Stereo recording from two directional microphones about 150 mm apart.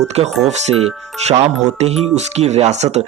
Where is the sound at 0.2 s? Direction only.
45° right (ahead or behind).